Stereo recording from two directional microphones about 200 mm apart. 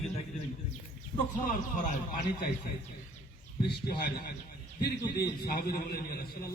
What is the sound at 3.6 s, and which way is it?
A man's voice, 50° left (ahead or behind).